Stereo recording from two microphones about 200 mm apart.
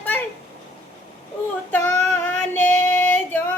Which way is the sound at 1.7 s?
10° left (ahead or behind).